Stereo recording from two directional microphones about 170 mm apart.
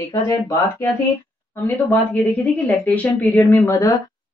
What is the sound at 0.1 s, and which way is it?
Speech, 20° left (ahead or behind).